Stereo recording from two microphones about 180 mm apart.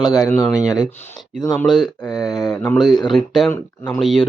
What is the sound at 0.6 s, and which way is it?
Speech, 20° left (ahead or behind).